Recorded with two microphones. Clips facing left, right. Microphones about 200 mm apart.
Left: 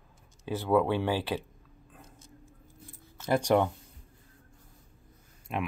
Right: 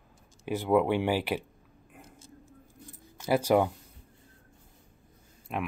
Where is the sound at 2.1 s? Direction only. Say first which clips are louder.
Right 2 dB; 30° right (ahead or behind).